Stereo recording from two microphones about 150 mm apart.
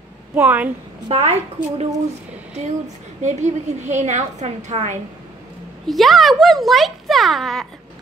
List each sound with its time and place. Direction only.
0.3 s a woman's voice: 10° right (ahead or behind)
1.0 s a woman's voice: 45° right (ahead or behind)
3.2 s a woman's voice: 55° right (ahead or behind)
5.9 s speech: centre (ahead or behind)